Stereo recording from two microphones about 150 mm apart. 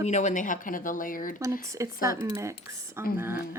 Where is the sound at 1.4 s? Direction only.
20° right (ahead or behind).